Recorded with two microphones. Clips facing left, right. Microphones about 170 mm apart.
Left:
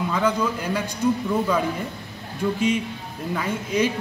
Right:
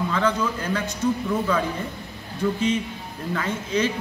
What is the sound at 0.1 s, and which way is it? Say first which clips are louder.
Speech: left 3 dB; 10° left (ahead or behind).